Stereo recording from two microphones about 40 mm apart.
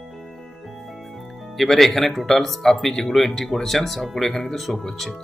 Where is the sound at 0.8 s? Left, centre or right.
Centre.